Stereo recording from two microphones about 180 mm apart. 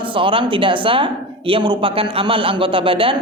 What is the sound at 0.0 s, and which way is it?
A woman's voice, 30° right (ahead or behind).